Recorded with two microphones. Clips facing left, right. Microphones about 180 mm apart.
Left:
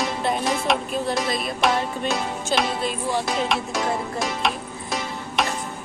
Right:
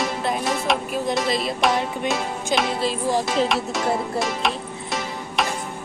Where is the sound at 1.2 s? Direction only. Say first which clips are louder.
Right 1 dB; 25° right (ahead or behind).